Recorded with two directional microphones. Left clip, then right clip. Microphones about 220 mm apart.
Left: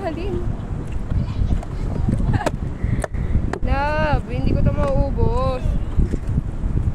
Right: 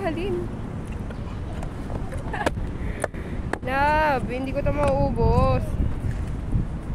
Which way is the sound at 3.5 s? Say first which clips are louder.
Right 1 dB; 10° right (ahead or behind).